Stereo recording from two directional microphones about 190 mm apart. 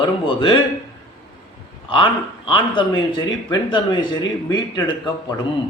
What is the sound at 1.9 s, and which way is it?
Speech, 25° left (ahead or behind).